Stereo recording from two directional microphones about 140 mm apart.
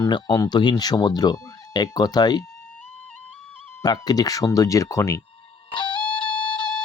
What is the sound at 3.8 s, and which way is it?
Speech, 25° left (ahead or behind).